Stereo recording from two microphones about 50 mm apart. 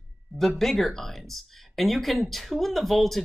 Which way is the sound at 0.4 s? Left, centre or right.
Centre.